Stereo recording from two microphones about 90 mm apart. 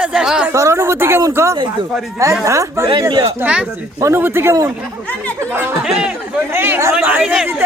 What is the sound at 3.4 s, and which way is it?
Speech, 15° right (ahead or behind).